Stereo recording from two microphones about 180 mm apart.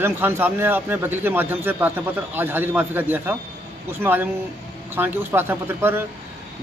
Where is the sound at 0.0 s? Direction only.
10° right (ahead or behind).